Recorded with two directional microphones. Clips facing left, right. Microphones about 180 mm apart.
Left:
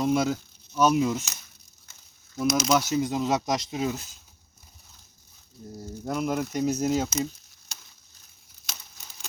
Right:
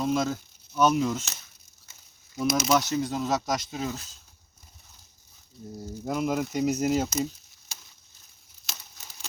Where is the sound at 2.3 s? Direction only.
Centre (ahead or behind); by 4.0 s 15° left (ahead or behind).